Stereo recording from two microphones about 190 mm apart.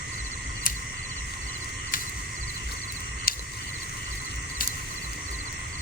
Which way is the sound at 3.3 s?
50° left (ahead or behind).